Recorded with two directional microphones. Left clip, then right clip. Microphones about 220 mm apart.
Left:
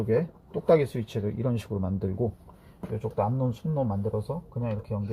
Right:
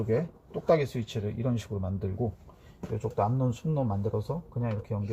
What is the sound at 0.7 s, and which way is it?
Speech, 40° left (ahead or behind).